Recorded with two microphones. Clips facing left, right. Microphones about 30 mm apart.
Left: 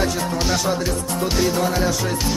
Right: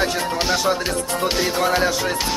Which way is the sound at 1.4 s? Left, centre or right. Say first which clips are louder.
Right 1 dB; right.